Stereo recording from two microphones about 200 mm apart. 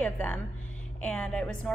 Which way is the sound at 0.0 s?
5° left (ahead or behind).